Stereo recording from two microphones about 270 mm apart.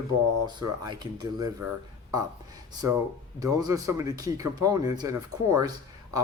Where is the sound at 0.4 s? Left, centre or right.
Centre.